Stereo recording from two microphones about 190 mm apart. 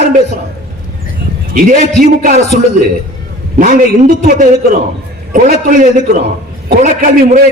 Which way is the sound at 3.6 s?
45° right (ahead or behind).